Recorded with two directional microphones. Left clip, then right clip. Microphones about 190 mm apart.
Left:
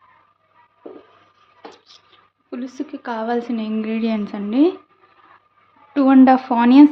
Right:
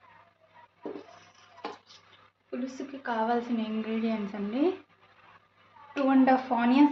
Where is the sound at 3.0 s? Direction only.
55° left (ahead or behind).